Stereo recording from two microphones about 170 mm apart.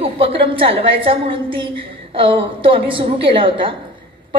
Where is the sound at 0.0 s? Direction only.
35° right (ahead or behind).